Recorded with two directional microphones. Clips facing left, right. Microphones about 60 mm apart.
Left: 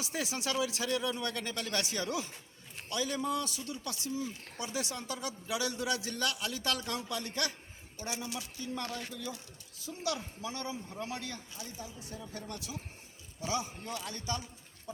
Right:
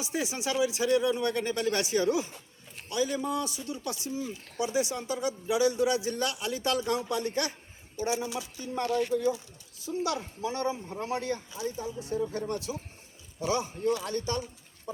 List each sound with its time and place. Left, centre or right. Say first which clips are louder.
0.0 s a man's voice: right 4 dB; centre; by 14.4 s right